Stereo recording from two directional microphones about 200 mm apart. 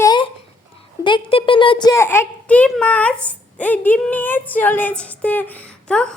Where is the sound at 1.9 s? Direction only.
10° left (ahead or behind).